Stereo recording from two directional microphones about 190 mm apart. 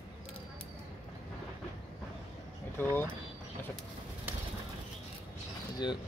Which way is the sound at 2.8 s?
10° left (ahead or behind).